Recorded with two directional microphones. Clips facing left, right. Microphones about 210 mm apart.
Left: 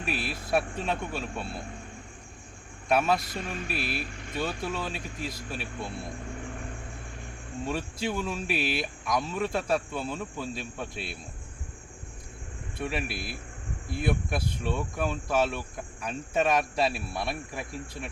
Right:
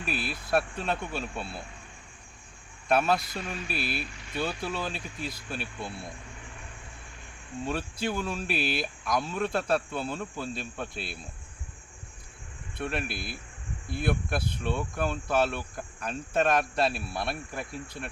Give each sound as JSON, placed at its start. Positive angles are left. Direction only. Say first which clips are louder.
{"t": 0.0, "sound": "speech", "louder": "left 1 dB", "side_deg": 0}
{"t": 2.9, "sound": "speech", "louder": "even", "side_deg": 0}
{"t": 3.4, "sound": "speech", "louder": "left 1 dB", "side_deg": 50}
{"t": 3.7, "sound": "speech", "louder": "even", "side_deg": 0}
{"t": 7.6, "sound": "speech", "louder": "even", "side_deg": 0}
{"t": 12.8, "sound": "speech", "louder": "even", "side_deg": 0}